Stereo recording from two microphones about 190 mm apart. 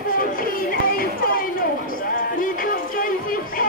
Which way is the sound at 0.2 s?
45° left (ahead or behind).